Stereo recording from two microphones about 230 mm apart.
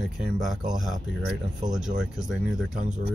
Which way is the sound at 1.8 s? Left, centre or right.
Centre.